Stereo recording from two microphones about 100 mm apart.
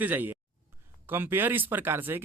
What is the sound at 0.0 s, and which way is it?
Speech, 20° right (ahead or behind).